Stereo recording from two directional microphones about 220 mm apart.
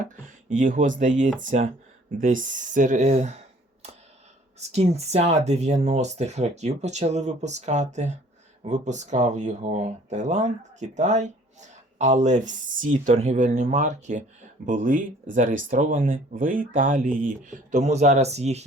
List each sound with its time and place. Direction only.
0.0 s speech: 35° right (ahead or behind)
4.7 s speech: 30° right (ahead or behind)